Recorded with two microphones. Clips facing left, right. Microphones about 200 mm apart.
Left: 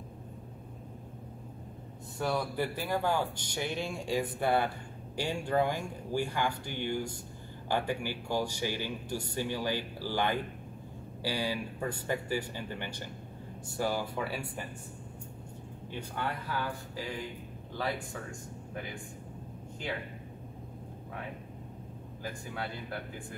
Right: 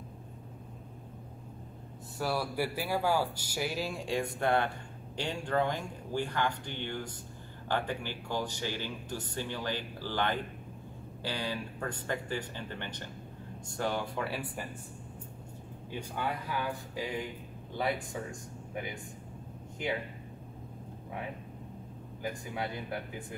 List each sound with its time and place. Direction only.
2.1 s speech: 5° right (ahead or behind)
15.9 s speech: 10° right (ahead or behind)
17.7 s speech: 20° right (ahead or behind)
22.2 s speech: 20° right (ahead or behind)